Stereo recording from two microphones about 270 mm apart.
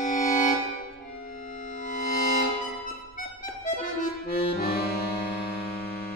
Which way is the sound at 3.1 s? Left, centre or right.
Left.